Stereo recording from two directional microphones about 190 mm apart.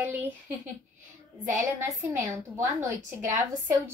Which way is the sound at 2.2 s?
15° right (ahead or behind).